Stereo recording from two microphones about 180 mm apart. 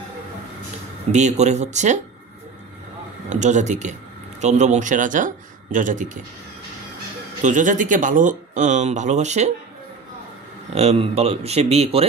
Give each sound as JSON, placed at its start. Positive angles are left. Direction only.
{"t": 1.1, "sound": "speech", "side_deg": -40}
{"t": 3.3, "sound": "speech", "side_deg": -40}
{"t": 7.4, "sound": "speech", "side_deg": -45}
{"t": 10.7, "sound": "speech", "side_deg": -35}